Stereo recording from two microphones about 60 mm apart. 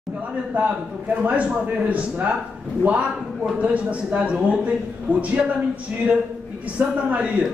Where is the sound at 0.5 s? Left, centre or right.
Right.